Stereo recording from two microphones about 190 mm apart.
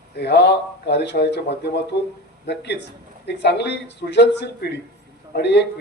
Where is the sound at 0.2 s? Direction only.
60° left (ahead or behind).